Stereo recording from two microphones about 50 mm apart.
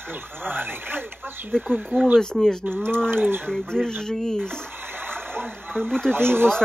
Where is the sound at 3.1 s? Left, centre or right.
Right.